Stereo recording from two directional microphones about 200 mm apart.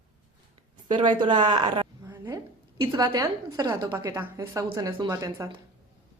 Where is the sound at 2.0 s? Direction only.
15° right (ahead or behind).